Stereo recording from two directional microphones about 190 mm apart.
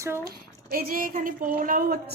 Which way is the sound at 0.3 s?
50° right (ahead or behind).